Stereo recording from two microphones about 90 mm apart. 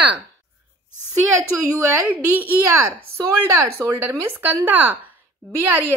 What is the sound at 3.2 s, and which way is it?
A woman's voice, 30° right (ahead or behind).